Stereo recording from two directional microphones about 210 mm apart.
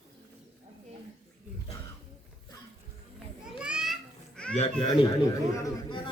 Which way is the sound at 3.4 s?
5° right (ahead or behind).